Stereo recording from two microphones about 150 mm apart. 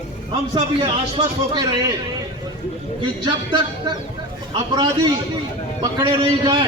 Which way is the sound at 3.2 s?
30° right (ahead or behind).